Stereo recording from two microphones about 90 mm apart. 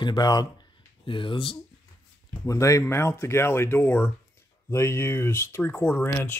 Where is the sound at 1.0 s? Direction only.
70° left (ahead or behind).